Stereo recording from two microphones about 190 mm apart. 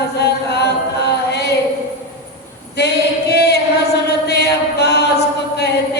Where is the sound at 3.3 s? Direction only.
60° left (ahead or behind).